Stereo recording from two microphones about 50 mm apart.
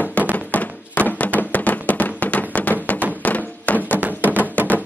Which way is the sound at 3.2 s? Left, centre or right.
Left.